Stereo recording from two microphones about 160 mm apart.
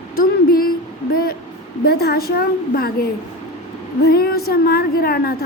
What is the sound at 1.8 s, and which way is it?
Speech, 75° left (ahead or behind).